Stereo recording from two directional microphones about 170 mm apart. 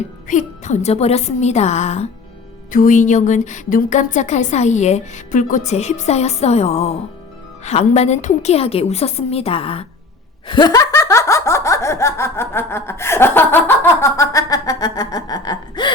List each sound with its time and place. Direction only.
0.3 s a woman's voice: 45° left (ahead or behind)
2.7 s a woman's voice: 50° left (ahead or behind); by 9.8 s 35° left (ahead or behind)
10.4 s laughter: 25° left (ahead or behind)